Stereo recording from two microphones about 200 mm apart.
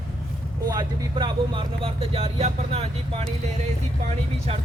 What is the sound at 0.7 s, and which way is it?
Speech, 20° right (ahead or behind).